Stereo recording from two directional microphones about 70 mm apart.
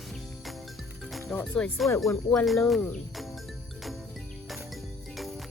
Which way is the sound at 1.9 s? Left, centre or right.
Left.